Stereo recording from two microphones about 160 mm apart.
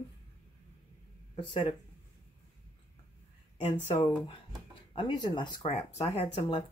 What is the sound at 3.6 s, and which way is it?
Speech, 40° left (ahead or behind).